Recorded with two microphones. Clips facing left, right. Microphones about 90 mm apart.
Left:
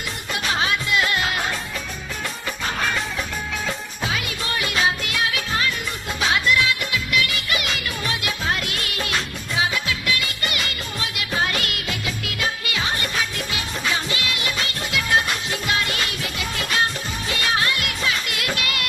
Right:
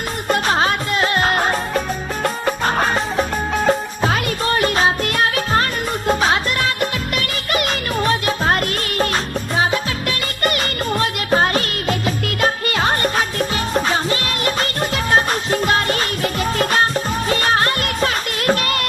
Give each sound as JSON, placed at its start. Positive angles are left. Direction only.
{"t": 0.3, "sound": "music", "side_deg": -45}